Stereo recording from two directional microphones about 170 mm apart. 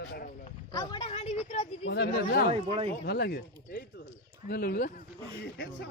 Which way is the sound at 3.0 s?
70° left (ahead or behind).